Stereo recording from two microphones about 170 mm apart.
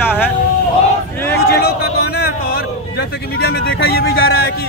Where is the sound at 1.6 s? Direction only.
70° left (ahead or behind).